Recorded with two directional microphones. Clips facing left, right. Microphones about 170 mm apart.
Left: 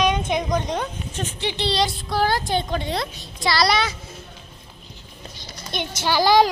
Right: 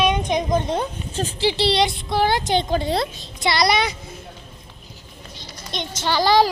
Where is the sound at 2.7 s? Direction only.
35° right (ahead or behind).